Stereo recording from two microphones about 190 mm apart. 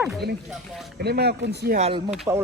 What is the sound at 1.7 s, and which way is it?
Speech, 35° right (ahead or behind).